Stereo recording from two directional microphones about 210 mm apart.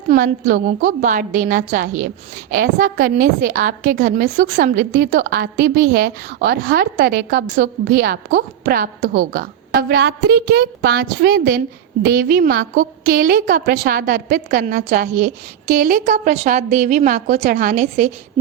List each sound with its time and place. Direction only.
0.1 s a woman's voice: 40° right (ahead or behind)